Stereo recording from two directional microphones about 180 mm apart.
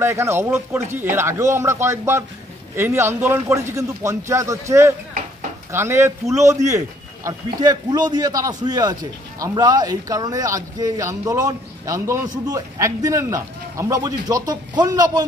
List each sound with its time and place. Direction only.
0.0 s a man's voice: 15° right (ahead or behind)